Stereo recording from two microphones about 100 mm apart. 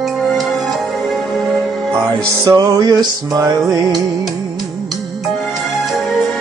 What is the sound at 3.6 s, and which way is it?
Music, centre (ahead or behind).